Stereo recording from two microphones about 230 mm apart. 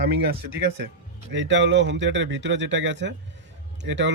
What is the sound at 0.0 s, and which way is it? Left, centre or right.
Speech, right.